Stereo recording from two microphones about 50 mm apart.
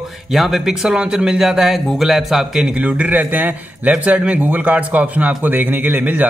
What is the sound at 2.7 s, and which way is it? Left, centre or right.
Speech, right.